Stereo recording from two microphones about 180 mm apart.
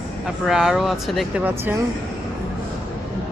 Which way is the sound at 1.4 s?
15° right (ahead or behind).